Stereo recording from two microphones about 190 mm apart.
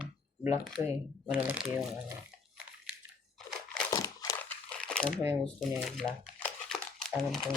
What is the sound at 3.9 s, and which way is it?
Crumpling, 15° left (ahead or behind).